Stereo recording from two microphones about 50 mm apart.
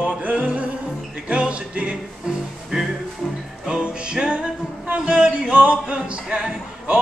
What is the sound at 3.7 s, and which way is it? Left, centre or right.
Music, right.